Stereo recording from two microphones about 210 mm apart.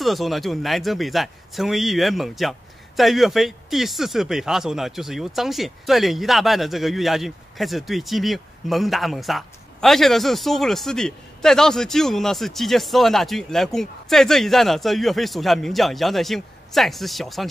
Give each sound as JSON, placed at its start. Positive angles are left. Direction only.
{"t": 0.0, "sound": "speech", "side_deg": 0}